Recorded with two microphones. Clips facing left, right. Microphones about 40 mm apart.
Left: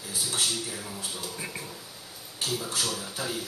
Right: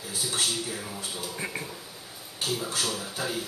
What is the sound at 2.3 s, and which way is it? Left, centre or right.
A man's voice, centre.